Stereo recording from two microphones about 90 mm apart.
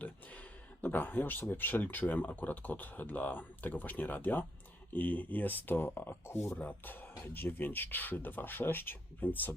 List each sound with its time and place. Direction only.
0.0 s speech: 15° left (ahead or behind)